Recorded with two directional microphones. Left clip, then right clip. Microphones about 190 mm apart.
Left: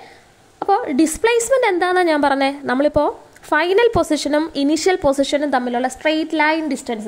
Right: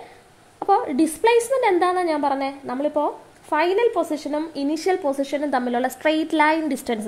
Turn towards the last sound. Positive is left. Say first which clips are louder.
# left 2 dB
turn(degrees=5)  # may be behind; listen again after turning